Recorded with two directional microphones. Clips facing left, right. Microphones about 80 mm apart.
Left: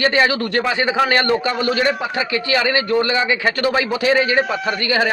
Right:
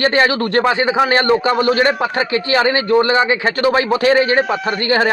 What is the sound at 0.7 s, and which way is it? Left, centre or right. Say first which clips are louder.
Speech: right 3 dB; right.